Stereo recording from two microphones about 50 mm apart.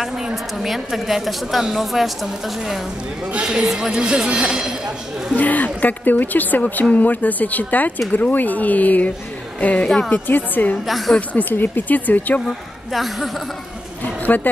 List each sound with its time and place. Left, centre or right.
0.0 s a woman's voice: centre
5.4 s a woman's voice: left
10.9 s a woman's voice: centre
11.1 s speech: left
12.4 s speech: centre
14.0 s a sound: left